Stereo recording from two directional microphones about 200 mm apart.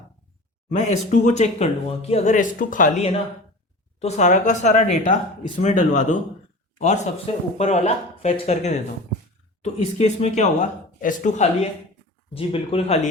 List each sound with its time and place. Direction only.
0.7 s a man's voice: 35° left (ahead or behind)